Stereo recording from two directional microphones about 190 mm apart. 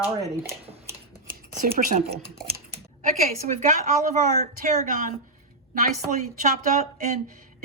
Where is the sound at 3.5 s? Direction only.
40° right (ahead or behind).